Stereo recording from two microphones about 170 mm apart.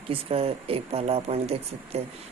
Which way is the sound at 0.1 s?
35° right (ahead or behind).